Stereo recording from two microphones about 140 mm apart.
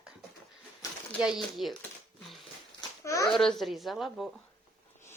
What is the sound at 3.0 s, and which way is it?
Speech, 25° left (ahead or behind).